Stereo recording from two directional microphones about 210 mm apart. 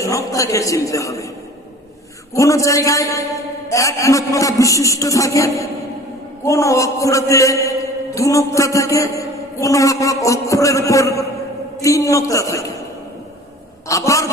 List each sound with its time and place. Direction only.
0.0 s a man's voice: 15° left (ahead or behind)
2.3 s a man's voice: 15° left (ahead or behind)
13.8 s a man's voice: 15° left (ahead or behind)